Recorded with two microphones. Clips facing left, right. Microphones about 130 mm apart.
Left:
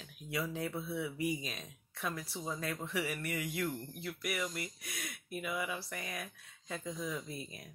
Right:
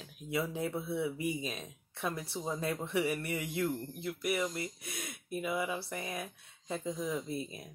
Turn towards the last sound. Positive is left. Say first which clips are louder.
# right 6 dB
turn(degrees=-25)  # may be behind; listen again after turning